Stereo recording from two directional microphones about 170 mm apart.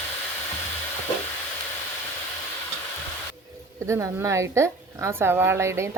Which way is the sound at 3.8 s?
15° right (ahead or behind).